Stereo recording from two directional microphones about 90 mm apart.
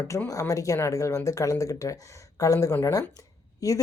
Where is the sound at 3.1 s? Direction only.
40° left (ahead or behind).